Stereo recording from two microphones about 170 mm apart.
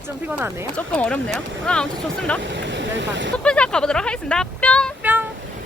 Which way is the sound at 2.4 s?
90° right.